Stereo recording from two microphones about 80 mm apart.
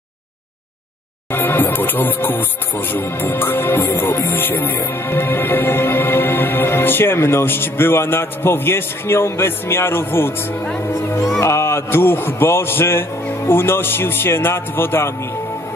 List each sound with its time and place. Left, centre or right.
1.3 s music: left
11.0 s a man's voice: left
13.5 s music: left